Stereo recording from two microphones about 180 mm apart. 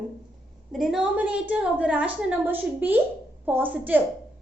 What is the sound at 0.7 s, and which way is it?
A woman's voice, centre (ahead or behind).